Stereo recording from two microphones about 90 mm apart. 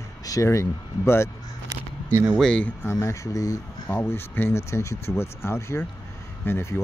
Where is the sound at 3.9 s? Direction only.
25° left (ahead or behind).